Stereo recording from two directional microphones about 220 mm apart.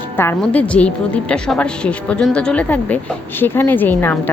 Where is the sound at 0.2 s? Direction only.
10° left (ahead or behind).